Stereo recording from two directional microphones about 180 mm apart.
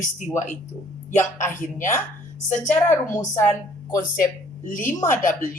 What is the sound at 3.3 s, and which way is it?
A woman's voice, 15° left (ahead or behind).